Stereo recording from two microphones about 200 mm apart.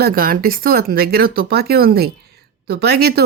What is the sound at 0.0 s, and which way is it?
Speech, 45° right (ahead or behind).